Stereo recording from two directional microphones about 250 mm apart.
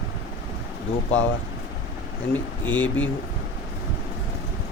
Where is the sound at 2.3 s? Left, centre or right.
Centre.